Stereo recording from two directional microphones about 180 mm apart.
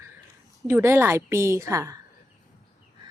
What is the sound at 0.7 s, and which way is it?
A woman's voice, 10° right (ahead or behind).